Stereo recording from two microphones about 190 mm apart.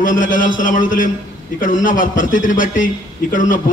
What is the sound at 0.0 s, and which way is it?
A man's voice, 45° left (ahead or behind).